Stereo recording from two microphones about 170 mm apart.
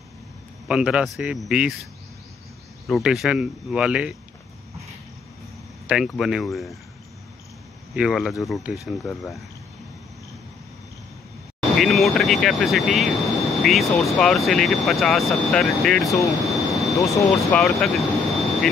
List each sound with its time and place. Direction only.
0.7 s speech: 5° right (ahead or behind)
2.9 s speech: centre (ahead or behind)
5.9 s speech: centre (ahead or behind)
7.9 s speech: 5° right (ahead or behind)
11.8 s speech: centre (ahead or behind)
16.3 s jet engine: centre (ahead or behind)
17.1 s speech: centre (ahead or behind)